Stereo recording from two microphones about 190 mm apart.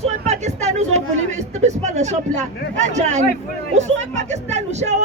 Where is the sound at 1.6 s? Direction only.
35° right (ahead or behind).